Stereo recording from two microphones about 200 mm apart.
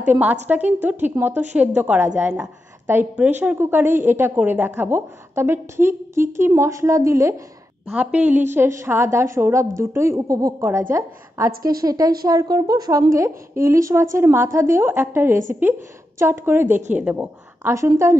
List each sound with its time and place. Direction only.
0.0 s a woman's voice: 10° right (ahead or behind)